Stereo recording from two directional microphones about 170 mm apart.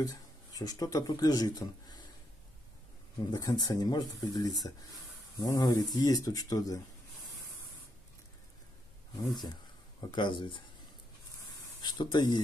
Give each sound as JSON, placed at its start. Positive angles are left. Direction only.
{"t": 0.0, "sound": "speech", "side_deg": 20}
{"t": 3.3, "sound": "speech", "side_deg": 25}
{"t": 9.3, "sound": "speech", "side_deg": 25}
{"t": 11.8, "sound": "speech", "side_deg": 25}